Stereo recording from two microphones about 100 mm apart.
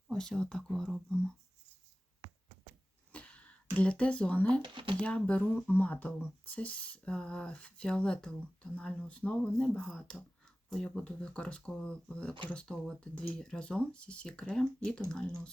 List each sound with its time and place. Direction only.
0.1 s speech: 5° left (ahead or behind)
3.1 s a sound: 15° left (ahead or behind)
4.6 s speech: 55° right (ahead or behind)
4.9 s speech: 10° left (ahead or behind)